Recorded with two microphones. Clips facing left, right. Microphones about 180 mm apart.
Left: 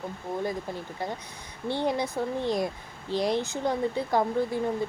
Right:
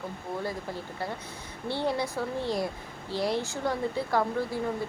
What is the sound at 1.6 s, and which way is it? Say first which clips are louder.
Speech: left 2 dB; 15° left (ahead or behind).